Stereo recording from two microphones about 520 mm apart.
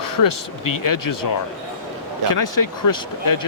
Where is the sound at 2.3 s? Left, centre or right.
Left.